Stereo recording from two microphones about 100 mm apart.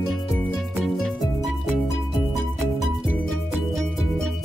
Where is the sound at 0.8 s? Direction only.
5° left (ahead or behind).